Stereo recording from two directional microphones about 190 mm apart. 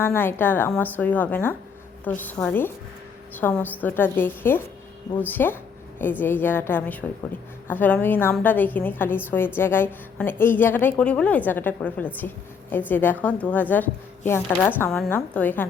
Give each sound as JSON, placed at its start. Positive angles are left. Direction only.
{"t": 0.0, "sound": "a woman's voice", "side_deg": 10}